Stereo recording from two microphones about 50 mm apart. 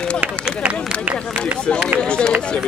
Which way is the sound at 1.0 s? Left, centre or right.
Right.